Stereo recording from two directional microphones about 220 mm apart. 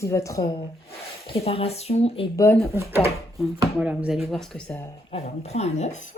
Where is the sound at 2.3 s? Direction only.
15° left (ahead or behind).